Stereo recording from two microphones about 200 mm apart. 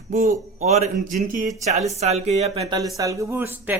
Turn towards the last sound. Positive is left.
turn(degrees=-10)  # may be behind; listen again after turning